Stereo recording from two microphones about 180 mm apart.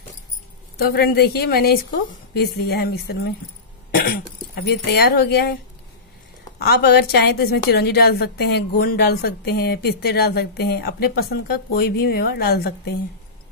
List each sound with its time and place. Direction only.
0.7 s a woman's voice: 60° left (ahead or behind)
6.6 s a woman's voice: 65° left (ahead or behind)